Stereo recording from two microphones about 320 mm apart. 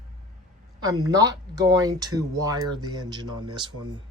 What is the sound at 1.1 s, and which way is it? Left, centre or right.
Speech, centre.